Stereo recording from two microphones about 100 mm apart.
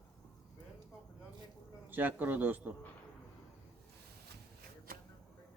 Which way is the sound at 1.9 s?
20° right (ahead or behind).